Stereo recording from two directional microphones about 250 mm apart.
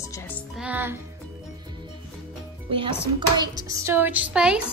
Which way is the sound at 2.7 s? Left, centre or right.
Right.